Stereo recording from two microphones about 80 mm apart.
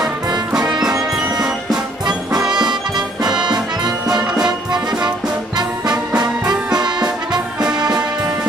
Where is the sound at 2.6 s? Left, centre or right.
Right.